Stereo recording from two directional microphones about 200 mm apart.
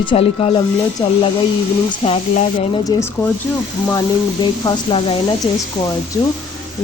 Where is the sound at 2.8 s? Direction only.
15° left (ahead or behind).